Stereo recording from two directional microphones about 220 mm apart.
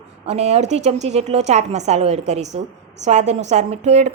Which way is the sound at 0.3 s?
30° right (ahead or behind).